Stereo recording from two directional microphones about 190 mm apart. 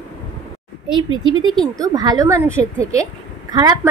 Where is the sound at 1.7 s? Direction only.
20° right (ahead or behind).